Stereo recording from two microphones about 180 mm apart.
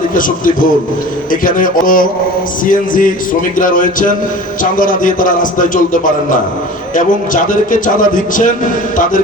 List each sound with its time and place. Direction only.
0.1 s a man's voice: 50° left (ahead or behind)